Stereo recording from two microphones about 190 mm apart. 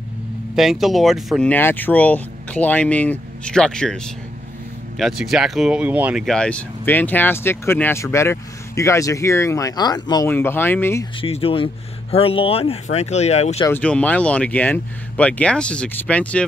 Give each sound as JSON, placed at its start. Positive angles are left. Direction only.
{"t": 0.6, "sound": "speech", "side_deg": 0}
{"t": 1.5, "sound": "speech", "side_deg": 10}
{"t": 11.1, "sound": "speech", "side_deg": 30}
{"t": 13.6, "sound": "speech", "side_deg": 10}